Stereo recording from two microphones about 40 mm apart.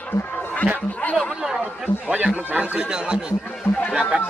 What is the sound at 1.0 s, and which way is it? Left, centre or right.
Speech, left.